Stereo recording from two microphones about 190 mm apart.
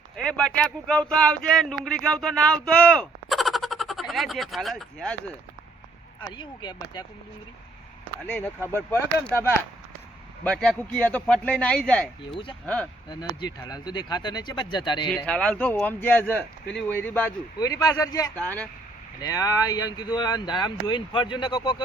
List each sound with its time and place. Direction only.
0.2 s speech: 5° left (ahead or behind)
6.2 s speech: 25° left (ahead or behind)
8.3 s speech: 10° left (ahead or behind)
10.4 s speech: 5° left (ahead or behind)
12.3 s speech: 25° left (ahead or behind)
12.6 s speech: 5° left (ahead or behind)
13.6 s speech: 20° left (ahead or behind)
15.1 s speech: 5° left (ahead or behind)
18.3 s speech: 5° left (ahead or behind)
19.2 s speech: 20° left (ahead or behind)